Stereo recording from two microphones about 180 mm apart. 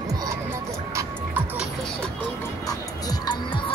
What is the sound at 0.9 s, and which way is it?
Music, 10° right (ahead or behind).